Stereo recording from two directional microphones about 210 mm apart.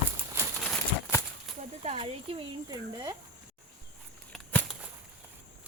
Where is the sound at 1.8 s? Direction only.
30° right (ahead or behind).